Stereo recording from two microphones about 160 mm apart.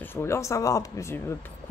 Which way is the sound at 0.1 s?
15° left (ahead or behind).